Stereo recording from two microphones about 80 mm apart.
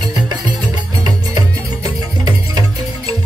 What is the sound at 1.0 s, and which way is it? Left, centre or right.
Music, right.